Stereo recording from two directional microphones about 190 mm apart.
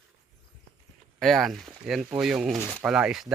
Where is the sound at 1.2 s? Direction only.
Centre (ahead or behind).